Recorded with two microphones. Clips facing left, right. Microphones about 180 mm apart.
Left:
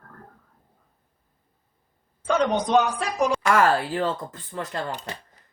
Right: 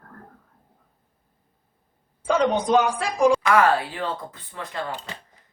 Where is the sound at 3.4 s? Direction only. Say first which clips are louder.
Right 1 dB; 45° left (ahead or behind).